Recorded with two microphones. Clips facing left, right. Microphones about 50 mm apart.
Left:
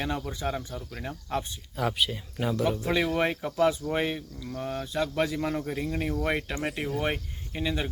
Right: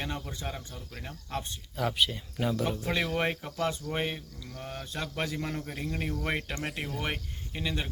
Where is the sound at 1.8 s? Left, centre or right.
Centre.